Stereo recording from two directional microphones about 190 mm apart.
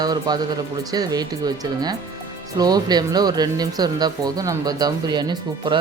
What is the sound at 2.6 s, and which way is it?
Speech, 20° right (ahead or behind).